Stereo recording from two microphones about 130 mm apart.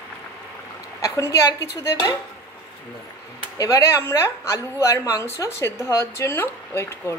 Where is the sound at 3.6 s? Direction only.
25° left (ahead or behind).